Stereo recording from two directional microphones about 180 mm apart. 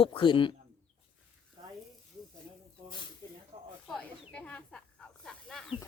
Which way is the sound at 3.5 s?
30° right (ahead or behind).